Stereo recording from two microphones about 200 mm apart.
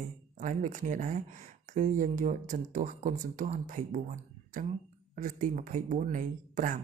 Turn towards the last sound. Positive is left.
turn(degrees=-40)  # may be behind; listen again after turning